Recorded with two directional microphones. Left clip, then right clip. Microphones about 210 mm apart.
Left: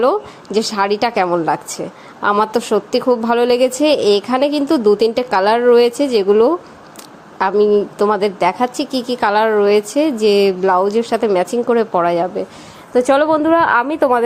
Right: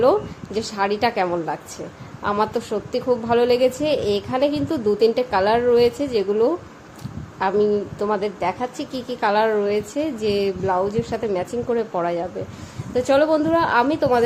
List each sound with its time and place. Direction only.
0.0 s a woman's voice: 25° left (ahead or behind)
12.9 s a woman's voice: 10° left (ahead or behind)